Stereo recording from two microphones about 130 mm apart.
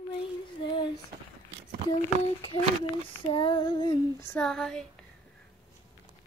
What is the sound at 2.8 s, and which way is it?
Female singing, 45° left (ahead or behind).